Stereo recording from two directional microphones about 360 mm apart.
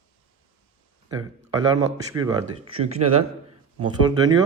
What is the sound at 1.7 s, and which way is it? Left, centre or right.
Speech, centre.